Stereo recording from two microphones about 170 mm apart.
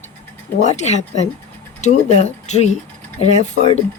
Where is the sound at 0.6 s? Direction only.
40° left (ahead or behind).